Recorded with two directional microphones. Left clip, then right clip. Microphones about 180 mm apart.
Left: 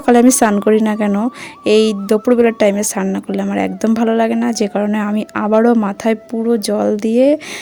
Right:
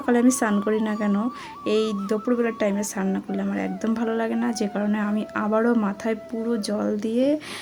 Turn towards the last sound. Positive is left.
turn(degrees=45)  # may be behind; listen again after turning